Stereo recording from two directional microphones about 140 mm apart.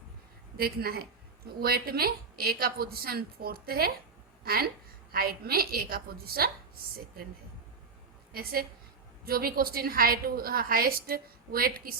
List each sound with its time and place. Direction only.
0.5 s a woman's voice: 90° right
8.3 s a woman's voice: 90° right